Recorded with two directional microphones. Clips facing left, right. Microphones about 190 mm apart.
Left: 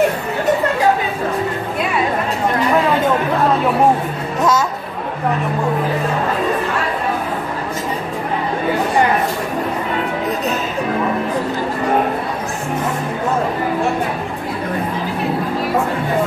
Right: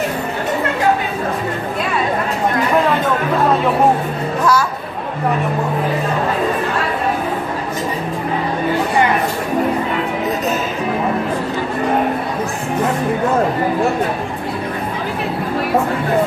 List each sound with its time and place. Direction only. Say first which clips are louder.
4.4 s speech: even; 20° left (ahead or behind)